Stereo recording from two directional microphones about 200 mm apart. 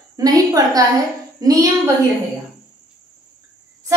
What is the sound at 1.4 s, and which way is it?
Child singing, 20° right (ahead or behind).